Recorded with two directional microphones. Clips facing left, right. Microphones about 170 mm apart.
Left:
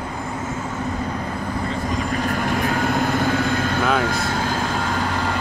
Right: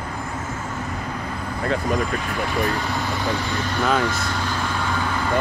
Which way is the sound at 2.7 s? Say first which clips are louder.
Left 5 dB; 50° left (ahead or behind).